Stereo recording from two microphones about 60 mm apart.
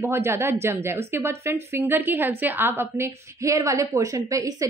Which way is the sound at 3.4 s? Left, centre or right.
Right.